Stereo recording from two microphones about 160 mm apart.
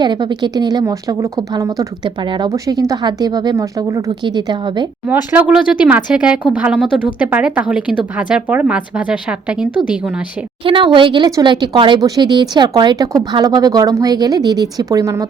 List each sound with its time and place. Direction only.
0.0 s a woman's voice: 30° right (ahead or behind)
5.0 s speech: 10° right (ahead or behind)
10.6 s a woman's voice: 30° right (ahead or behind)